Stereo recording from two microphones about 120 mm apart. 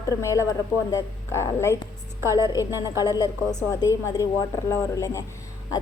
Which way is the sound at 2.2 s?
25° right (ahead or behind).